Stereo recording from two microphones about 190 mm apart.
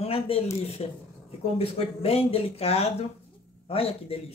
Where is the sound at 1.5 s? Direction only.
30° left (ahead or behind).